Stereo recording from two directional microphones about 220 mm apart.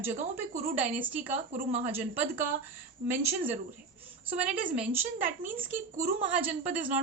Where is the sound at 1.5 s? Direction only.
35° right (ahead or behind).